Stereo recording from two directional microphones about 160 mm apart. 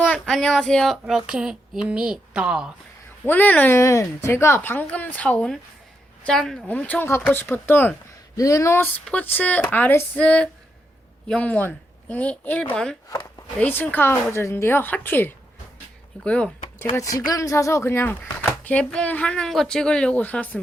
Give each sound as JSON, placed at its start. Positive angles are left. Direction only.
{"t": 0.0, "sound": "speech", "side_deg": 5}
{"t": 3.2, "sound": "a woman's voice", "side_deg": 10}
{"t": 16.9, "sound": "a woman's voice", "side_deg": 20}